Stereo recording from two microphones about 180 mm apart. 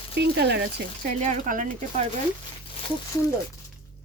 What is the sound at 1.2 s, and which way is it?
Speech, 45° right (ahead or behind).